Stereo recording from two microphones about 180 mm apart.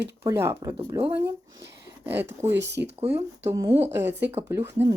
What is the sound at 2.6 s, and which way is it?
Speech, 75° right (ahead or behind).